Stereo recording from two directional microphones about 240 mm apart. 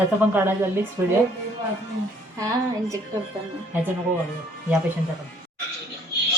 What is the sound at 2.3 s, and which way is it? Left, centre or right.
Speech, centre.